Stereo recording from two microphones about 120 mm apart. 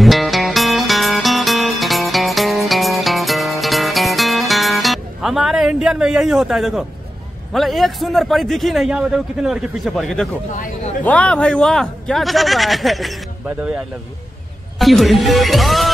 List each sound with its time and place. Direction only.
0.0 s music: centre (ahead or behind)
7.5 s a man's voice: centre (ahead or behind)
10.5 s speech: 90° left
11.1 s a man's voice: 10° left (ahead or behind)
13.5 s speech: 10° right (ahead or behind)
14.8 s a man's voice: centre (ahead or behind)